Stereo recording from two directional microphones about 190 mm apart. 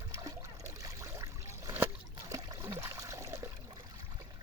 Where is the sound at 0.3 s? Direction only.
15° right (ahead or behind).